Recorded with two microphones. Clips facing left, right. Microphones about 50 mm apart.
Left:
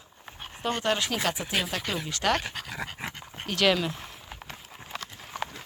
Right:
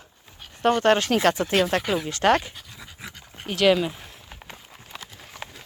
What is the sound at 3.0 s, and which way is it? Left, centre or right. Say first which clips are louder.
Dog: left 4 dB; left.